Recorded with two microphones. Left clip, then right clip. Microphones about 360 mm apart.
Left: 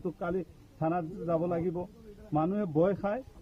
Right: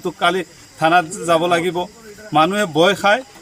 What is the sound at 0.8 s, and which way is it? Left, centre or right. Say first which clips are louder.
A man's voice: right 18 dB; left.